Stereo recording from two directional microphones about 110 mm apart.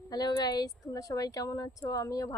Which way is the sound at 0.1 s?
35° left (ahead or behind).